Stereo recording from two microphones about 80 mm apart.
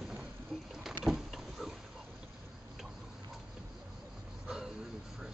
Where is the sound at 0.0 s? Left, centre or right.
Centre.